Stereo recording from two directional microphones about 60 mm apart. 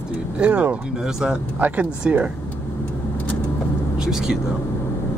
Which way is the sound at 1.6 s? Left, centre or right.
Right.